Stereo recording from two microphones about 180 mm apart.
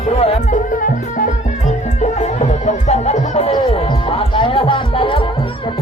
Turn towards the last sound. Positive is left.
turn(degrees=30)  # may be behind; listen again after turning